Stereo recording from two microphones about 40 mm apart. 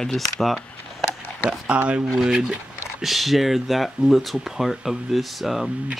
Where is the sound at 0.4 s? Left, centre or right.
Centre.